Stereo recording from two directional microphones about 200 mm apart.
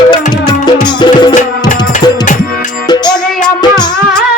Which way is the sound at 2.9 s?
20° left (ahead or behind).